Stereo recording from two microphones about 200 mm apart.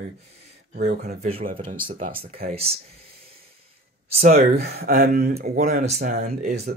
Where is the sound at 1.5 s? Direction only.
40° right (ahead or behind).